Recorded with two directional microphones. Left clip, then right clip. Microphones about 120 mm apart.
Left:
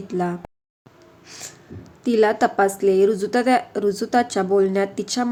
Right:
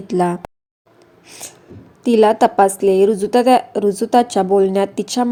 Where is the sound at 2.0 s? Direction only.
30° right (ahead or behind).